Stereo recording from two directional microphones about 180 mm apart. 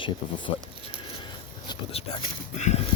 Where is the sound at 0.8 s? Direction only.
30° left (ahead or behind).